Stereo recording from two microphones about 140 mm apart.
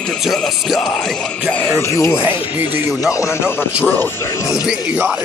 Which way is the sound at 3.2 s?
20° left (ahead or behind).